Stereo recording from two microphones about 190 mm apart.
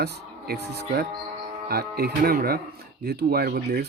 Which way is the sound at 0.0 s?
60° right (ahead or behind).